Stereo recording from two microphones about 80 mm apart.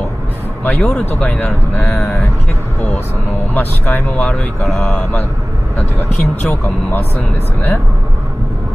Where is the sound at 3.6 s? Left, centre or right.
Left.